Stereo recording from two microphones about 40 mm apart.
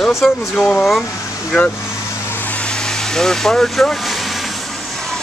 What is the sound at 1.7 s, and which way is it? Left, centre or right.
Vehicle, left.